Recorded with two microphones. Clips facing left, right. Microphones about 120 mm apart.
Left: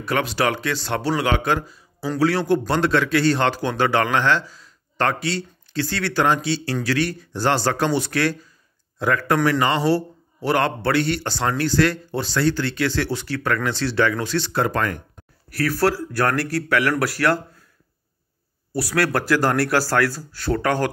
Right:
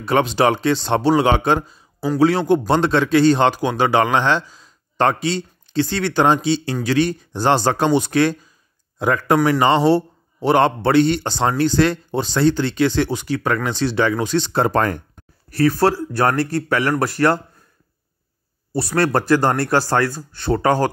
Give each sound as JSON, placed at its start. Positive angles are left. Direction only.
{"t": 0.0, "sound": "a man's voice", "side_deg": -25}
{"t": 18.8, "sound": "a man's voice", "side_deg": -25}